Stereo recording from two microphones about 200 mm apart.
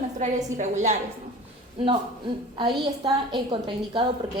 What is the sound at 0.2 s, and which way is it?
Speech, 35° right (ahead or behind).